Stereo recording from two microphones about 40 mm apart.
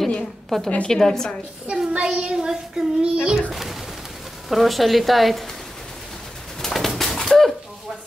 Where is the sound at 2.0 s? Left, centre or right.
Centre.